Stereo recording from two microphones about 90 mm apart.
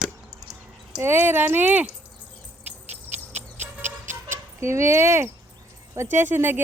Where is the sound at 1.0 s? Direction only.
25° right (ahead or behind).